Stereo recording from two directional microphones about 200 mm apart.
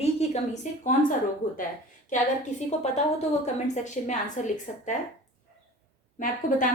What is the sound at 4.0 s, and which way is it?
Speech, 35° left (ahead or behind).